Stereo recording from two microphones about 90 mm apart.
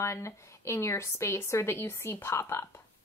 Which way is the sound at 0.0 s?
30° left (ahead or behind).